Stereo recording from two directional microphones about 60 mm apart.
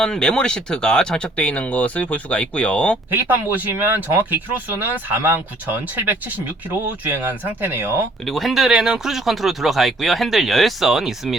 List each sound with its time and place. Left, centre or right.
0.0 s speech: centre
3.1 s speech: right
8.2 s speech: centre